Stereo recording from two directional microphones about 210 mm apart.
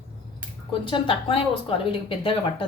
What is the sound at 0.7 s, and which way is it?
Speech, 25° left (ahead or behind).